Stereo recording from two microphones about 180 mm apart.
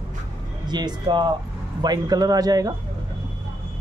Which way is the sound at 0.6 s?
25° right (ahead or behind).